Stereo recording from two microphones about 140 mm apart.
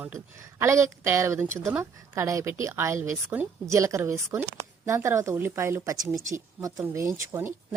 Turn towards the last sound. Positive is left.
turn(degrees=-20)  # may be behind; listen again after turning